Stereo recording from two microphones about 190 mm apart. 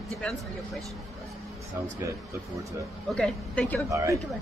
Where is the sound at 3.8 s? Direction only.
15° right (ahead or behind).